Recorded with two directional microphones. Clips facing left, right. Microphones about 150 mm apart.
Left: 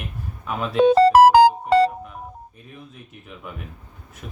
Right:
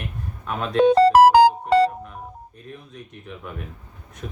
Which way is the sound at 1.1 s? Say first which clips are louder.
Left 1 dB; 90° left.